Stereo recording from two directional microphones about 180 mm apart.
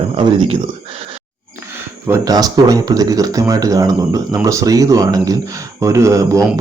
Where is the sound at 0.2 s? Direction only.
30° right (ahead or behind).